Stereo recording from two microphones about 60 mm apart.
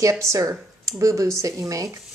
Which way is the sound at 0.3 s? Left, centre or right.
Right.